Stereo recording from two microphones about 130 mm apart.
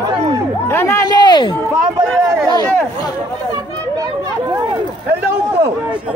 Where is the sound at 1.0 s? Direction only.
35° left (ahead or behind).